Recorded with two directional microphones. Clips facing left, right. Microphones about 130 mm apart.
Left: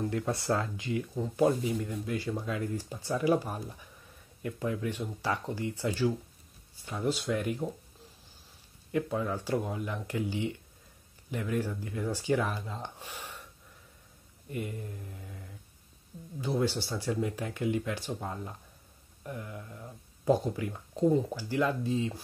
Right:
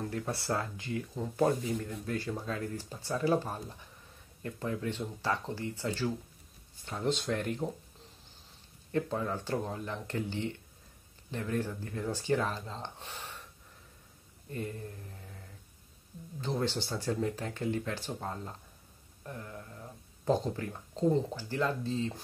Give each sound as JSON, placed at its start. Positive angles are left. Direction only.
{"t": 0.2, "sound": "speech", "side_deg": 20}
{"t": 8.9, "sound": "speech", "side_deg": 10}
{"t": 14.5, "sound": "speech", "side_deg": 15}
{"t": 16.3, "sound": "speech", "side_deg": 10}